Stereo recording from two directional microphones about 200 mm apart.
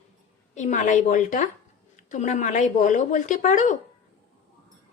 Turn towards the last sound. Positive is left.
turn(degrees=40)  # may be behind; listen again after turning